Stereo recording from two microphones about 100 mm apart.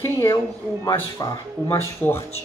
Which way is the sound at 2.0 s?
20° left (ahead or behind).